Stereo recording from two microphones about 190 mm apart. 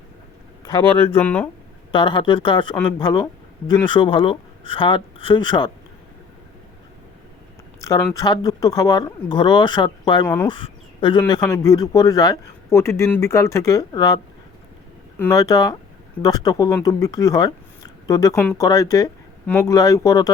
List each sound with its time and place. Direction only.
0.6 s a man's voice: 10° left (ahead or behind)
1.9 s speech: 25° left (ahead or behind)
7.8 s speech: 15° left (ahead or behind)
10.5 s a sound: 25° left (ahead or behind)
11.2 s a man's voice: 20° left (ahead or behind)
15.2 s speech: 20° left (ahead or behind)